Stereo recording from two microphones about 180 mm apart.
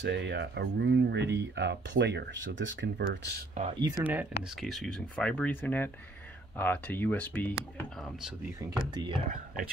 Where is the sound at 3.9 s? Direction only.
10° right (ahead or behind); by 7.8 s 10° left (ahead or behind).